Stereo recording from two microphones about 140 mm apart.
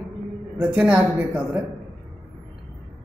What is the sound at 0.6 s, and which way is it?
A woman's voice, 10° right (ahead or behind).